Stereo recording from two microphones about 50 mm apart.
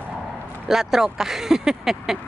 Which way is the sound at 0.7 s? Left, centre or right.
Centre.